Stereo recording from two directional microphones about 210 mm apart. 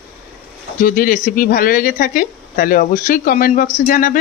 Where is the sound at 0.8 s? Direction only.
40° left (ahead or behind).